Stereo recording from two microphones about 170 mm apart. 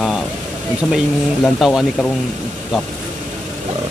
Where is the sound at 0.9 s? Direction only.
Centre (ahead or behind).